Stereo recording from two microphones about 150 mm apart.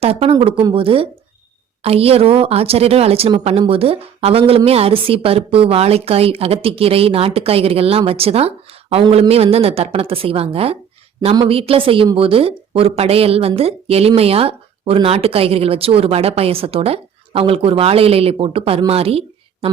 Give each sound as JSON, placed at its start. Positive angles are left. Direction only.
{"t": 0.0, "sound": "a woman's voice", "side_deg": -40}